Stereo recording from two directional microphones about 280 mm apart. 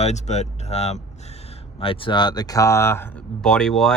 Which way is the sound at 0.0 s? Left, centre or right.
Left.